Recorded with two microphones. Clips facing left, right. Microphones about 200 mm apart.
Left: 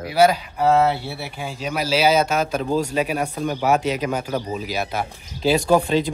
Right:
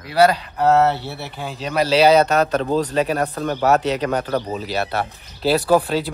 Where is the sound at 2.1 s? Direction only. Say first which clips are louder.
Right 3 dB; 65° right (ahead or behind).